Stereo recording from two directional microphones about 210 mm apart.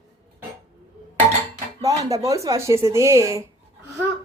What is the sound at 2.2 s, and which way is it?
A woman's voice, 15° right (ahead or behind).